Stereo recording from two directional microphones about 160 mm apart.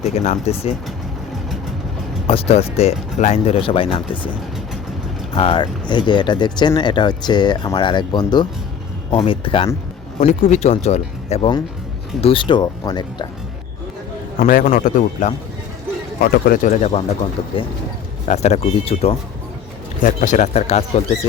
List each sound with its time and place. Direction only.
0.0 s speech: 45° left (ahead or behind)
2.2 s speech: 35° left (ahead or behind)
5.3 s speech: 35° left (ahead or behind)
10.2 s speech: 45° left (ahead or behind); by 13.2 s 25° left (ahead or behind)
14.4 s a man's voice: 55° left (ahead or behind)
18.3 s speech: 45° left (ahead or behind)
20.1 s speech: 50° left (ahead or behind)